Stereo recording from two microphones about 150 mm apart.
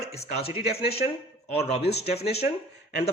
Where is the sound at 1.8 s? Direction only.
90° left.